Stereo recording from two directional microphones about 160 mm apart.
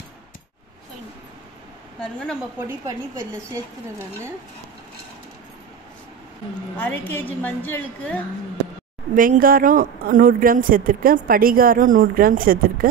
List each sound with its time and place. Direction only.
2.0 s a woman's voice: 5° left (ahead or behind)
2.6 s a woman's voice: 20° right (ahead or behind)
6.8 s a woman's voice: 10° left (ahead or behind)
9.1 s speech: 55° right (ahead or behind)